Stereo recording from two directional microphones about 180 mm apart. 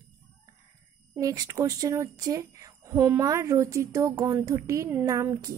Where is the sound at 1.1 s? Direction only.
20° right (ahead or behind).